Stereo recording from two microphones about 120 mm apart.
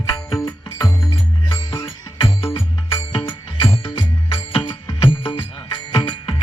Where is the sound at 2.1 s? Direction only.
45° left (ahead or behind).